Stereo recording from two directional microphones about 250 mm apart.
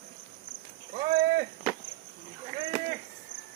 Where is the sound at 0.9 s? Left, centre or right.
Right.